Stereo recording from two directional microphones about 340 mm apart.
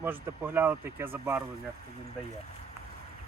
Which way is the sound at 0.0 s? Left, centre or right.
Centre.